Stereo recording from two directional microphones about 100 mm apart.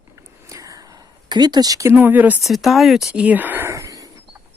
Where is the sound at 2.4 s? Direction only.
Centre (ahead or behind).